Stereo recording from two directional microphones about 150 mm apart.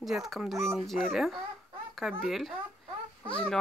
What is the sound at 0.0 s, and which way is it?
Speech, centre (ahead or behind).